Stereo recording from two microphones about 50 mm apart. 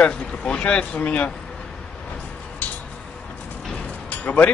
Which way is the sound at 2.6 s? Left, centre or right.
Left.